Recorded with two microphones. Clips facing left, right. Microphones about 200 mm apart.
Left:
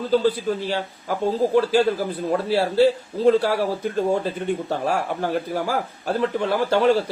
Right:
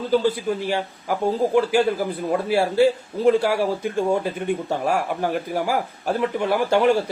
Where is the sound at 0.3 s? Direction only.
10° right (ahead or behind).